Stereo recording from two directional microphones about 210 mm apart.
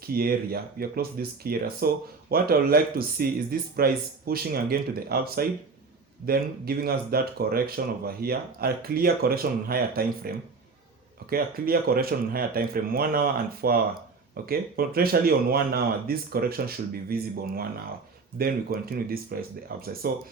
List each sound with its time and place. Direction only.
0.0 s speech: 45° right (ahead or behind)